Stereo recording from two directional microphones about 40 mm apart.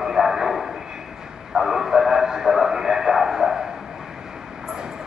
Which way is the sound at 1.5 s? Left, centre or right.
Centre.